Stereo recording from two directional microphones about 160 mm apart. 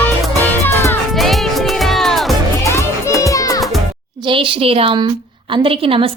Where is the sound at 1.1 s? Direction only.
Centre (ahead or behind).